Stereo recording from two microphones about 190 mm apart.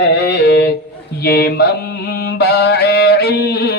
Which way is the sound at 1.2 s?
55° left (ahead or behind).